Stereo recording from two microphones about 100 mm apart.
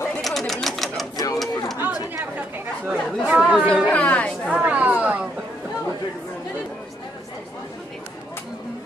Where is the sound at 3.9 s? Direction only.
15° left (ahead or behind).